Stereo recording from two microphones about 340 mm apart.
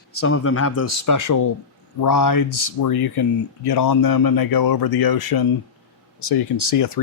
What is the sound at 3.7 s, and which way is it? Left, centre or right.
Speech, left.